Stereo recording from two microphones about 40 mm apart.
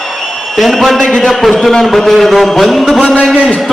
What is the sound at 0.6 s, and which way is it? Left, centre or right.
Speech, centre.